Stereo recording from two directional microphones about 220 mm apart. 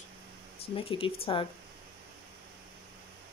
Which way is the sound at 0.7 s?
25° left (ahead or behind).